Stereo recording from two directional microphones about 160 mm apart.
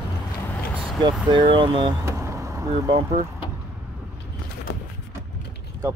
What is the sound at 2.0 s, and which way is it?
Vehicle, 20° right (ahead or behind).